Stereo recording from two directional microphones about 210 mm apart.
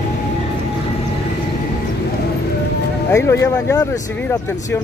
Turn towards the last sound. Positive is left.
turn(degrees=15)  # may be behind; listen again after turning